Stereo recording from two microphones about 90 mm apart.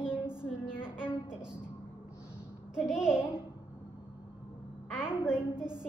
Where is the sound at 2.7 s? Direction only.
10° right (ahead or behind).